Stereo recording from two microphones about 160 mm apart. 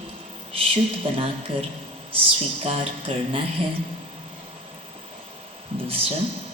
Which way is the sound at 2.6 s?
35° right (ahead or behind).